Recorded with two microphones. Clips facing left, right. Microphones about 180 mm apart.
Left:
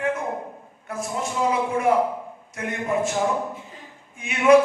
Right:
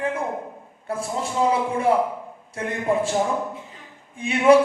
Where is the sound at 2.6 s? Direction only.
30° right (ahead or behind).